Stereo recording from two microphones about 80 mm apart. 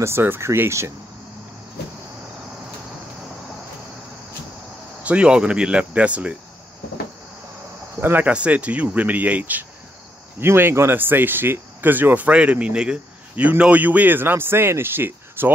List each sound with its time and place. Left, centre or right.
0.0 s speech: right
5.0 s speech: centre
8.0 s speech: right